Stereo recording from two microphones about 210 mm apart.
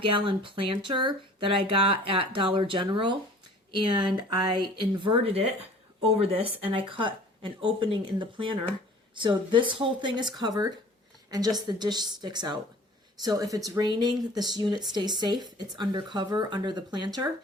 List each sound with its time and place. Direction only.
0.0 s speech: 25° right (ahead or behind)